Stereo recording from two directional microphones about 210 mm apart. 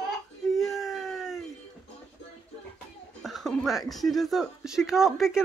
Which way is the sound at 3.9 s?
Centre (ahead or behind).